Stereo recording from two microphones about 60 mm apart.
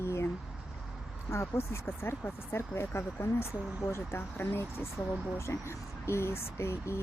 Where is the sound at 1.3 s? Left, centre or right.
Left.